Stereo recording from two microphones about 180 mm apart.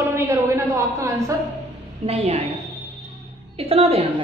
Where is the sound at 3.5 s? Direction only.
35° right (ahead or behind).